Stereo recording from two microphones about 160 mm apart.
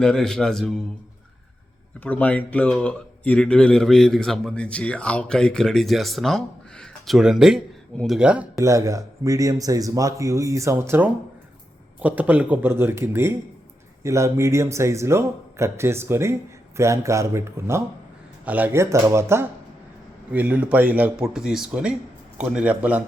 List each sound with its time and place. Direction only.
0.0 s speech: 5° left (ahead or behind)
2.0 s speech: 10° left (ahead or behind)
8.5 s speech: 20° right (ahead or behind)